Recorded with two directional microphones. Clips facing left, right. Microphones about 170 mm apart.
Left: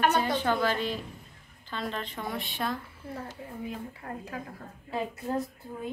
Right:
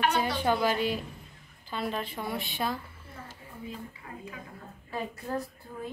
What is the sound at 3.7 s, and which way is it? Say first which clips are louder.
Speech: left 4 dB; 65° left (ahead or behind).